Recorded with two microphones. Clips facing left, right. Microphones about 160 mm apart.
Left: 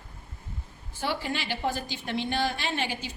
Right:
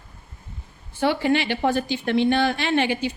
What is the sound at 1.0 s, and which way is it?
Speech, 70° right (ahead or behind).